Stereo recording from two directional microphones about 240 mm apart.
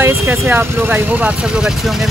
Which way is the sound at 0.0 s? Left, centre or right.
Centre.